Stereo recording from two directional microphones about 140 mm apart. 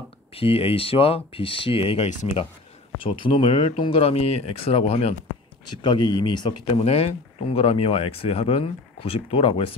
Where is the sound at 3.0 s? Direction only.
40° left (ahead or behind).